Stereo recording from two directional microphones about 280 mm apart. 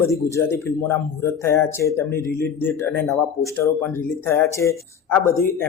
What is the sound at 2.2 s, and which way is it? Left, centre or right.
Speech, left.